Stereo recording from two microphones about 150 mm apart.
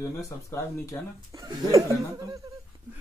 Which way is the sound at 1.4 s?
20° right (ahead or behind).